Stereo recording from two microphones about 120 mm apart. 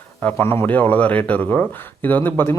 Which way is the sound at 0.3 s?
20° left (ahead or behind).